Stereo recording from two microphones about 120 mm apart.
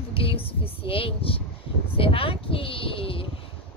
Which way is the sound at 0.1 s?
50° left (ahead or behind).